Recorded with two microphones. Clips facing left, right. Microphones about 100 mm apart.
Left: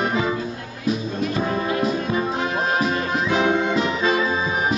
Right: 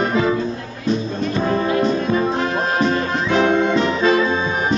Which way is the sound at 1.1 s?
30° right (ahead or behind).